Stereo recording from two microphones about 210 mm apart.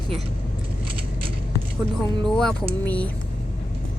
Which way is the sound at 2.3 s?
5° left (ahead or behind).